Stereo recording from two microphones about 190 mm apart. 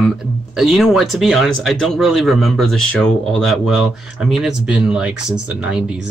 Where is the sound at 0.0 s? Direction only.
Centre (ahead or behind).